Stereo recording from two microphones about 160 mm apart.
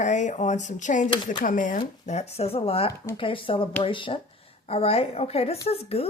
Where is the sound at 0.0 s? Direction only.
50° left (ahead or behind).